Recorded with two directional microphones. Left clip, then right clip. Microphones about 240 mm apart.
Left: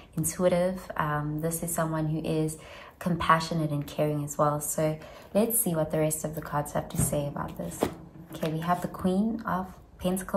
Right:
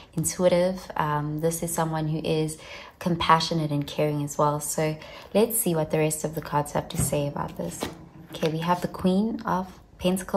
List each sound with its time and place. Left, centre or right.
0.3 s speech: centre